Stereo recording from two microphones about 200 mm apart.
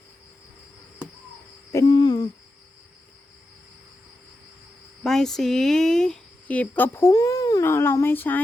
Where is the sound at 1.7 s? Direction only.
20° left (ahead or behind).